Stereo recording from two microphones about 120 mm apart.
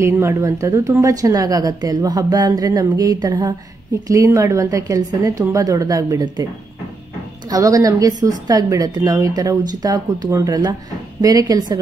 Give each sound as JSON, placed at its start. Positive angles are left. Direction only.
{"t": 0.0, "sound": "a woman's voice", "side_deg": -20}
{"t": 7.4, "sound": "a woman's voice", "side_deg": -30}